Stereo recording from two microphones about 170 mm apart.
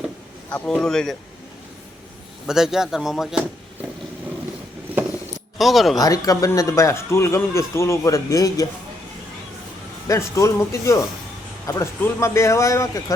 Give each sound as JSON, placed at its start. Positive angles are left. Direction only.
{"t": 0.5, "sound": "speech", "side_deg": 5}
{"t": 2.5, "sound": "speech", "side_deg": -5}
{"t": 5.5, "sound": "speech", "side_deg": 0}
{"t": 6.0, "sound": "speech", "side_deg": 20}
{"t": 10.1, "sound": "speech", "side_deg": 15}